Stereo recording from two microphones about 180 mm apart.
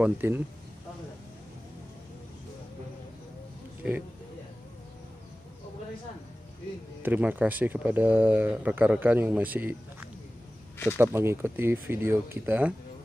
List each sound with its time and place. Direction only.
0.0 s speech: 10° right (ahead or behind)
7.0 s speech: 10° right (ahead or behind)